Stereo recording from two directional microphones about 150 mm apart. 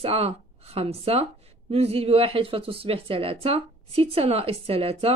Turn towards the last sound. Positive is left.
turn(degrees=-40)  # may be behind; listen again after turning